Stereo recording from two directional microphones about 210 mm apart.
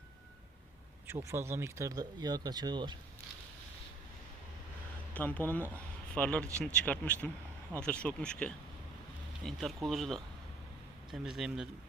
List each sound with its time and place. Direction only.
1.0 s speech: 10° right (ahead or behind)
5.1 s speech: 10° left (ahead or behind)